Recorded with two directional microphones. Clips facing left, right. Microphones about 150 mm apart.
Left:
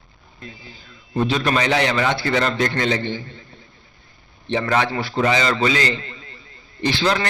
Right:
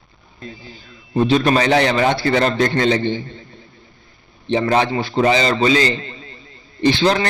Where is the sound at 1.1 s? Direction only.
35° right (ahead or behind).